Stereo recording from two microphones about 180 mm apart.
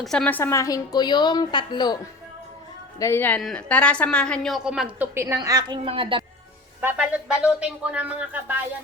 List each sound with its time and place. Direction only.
0.0 s a woman's voice: centre (ahead or behind); by 2.0 s 25° left (ahead or behind)
3.0 s a woman's voice: 15° left (ahead or behind); by 5.0 s 5° right (ahead or behind)
5.1 s a woman's voice: 15° right (ahead or behind)
6.8 s speech: 5° right (ahead or behind)